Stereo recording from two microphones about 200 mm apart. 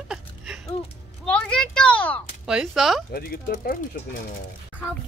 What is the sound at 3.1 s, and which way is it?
Speech, 45° left (ahead or behind).